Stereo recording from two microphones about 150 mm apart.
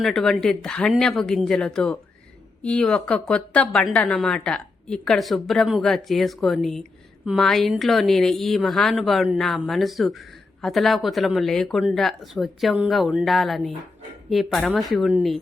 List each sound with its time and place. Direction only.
0.0 s a woman's voice: centre (ahead or behind)